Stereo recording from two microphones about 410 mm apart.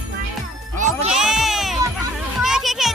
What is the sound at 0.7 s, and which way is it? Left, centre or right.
Music, centre.